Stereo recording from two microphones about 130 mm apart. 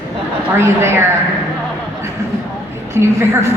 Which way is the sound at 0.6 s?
20° right (ahead or behind).